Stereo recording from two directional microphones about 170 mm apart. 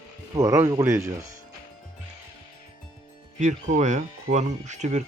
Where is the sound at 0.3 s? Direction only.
20° right (ahead or behind).